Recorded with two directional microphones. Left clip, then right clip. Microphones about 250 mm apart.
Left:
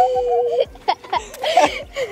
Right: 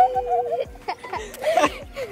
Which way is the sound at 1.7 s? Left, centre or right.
Left.